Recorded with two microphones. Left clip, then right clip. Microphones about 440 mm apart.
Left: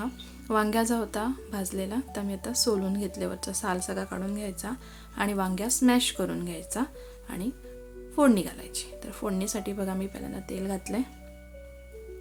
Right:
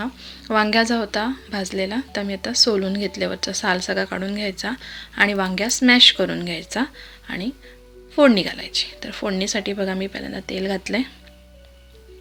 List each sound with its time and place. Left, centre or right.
0.0 s a woman's voice: left